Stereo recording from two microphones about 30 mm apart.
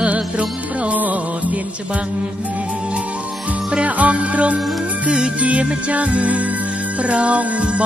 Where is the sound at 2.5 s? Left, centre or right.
Right.